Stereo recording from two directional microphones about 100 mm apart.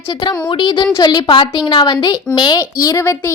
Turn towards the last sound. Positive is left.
turn(degrees=30)  # may be behind; listen again after turning